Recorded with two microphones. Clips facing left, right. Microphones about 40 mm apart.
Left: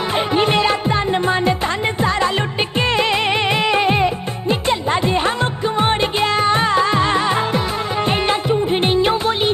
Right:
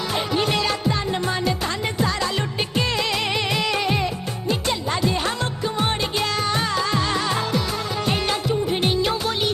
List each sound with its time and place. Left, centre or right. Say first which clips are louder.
0.1 s music: left 6 dB; left